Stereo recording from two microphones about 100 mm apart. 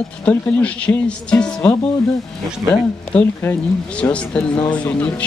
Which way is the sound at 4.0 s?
10° left (ahead or behind).